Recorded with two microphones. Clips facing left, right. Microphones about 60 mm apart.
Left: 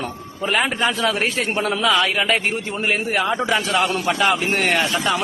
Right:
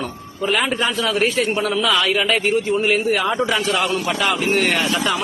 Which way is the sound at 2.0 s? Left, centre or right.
Left.